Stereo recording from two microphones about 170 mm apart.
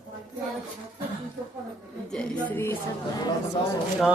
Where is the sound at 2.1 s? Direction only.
5° left (ahead or behind).